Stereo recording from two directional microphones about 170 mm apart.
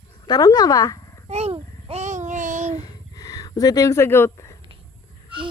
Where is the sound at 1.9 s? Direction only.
45° right (ahead or behind).